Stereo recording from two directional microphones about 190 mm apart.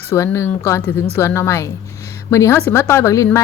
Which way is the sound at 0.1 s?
15° left (ahead or behind).